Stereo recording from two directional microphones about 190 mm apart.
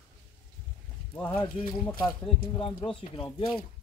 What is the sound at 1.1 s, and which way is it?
Speech, 10° left (ahead or behind).